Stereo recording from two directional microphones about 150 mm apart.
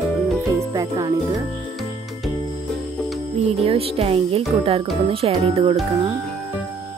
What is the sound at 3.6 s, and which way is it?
Speech, 40° right (ahead or behind).